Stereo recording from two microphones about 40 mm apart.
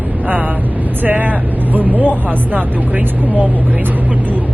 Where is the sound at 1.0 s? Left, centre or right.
Right.